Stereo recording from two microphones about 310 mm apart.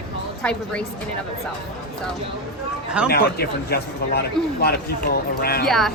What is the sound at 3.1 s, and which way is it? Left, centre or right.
A man's voice, left.